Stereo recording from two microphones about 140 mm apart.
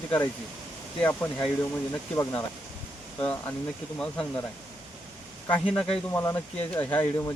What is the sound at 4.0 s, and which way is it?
Speech, 10° left (ahead or behind).